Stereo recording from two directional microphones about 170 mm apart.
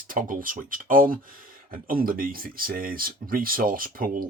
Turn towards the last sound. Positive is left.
turn(degrees=-55)  # may be behind; listen again after turning